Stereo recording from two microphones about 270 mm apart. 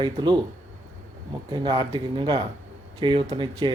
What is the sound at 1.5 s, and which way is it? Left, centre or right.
Speech, centre.